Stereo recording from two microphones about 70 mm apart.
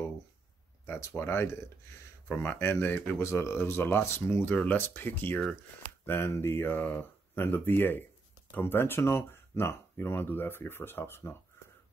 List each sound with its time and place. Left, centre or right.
0.9 s speech: left